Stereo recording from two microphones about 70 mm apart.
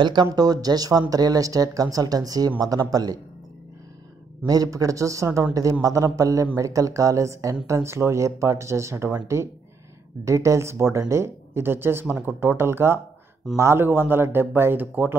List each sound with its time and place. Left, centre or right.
0.0 s speech: right
4.5 s a man's voice: right